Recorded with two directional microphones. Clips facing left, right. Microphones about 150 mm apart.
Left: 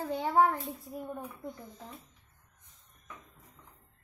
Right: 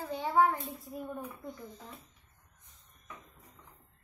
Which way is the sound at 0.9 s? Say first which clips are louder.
Even; 10° left (ahead or behind).